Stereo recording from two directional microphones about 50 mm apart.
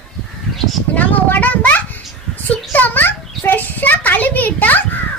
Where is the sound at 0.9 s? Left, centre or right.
Left.